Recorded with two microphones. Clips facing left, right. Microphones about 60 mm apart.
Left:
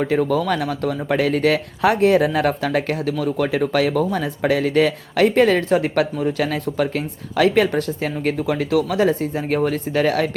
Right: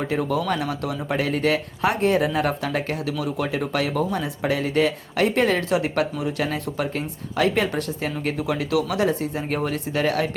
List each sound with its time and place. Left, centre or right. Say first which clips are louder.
0.0 s speech: left 5 dB; left